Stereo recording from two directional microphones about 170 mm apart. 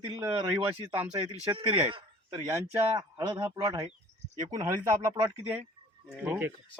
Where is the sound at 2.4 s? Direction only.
15° right (ahead or behind).